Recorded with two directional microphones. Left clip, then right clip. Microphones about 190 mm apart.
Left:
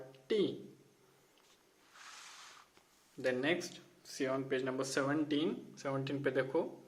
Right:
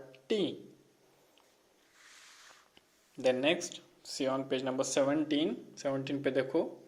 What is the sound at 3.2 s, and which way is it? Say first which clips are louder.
Speech: right 5 dB; 25° right (ahead or behind).